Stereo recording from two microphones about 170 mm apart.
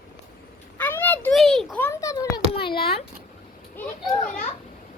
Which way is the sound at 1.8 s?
15° left (ahead or behind).